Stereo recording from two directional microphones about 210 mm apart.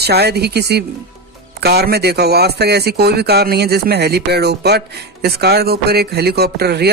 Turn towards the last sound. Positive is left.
turn(degrees=-50)  # may be behind; listen again after turning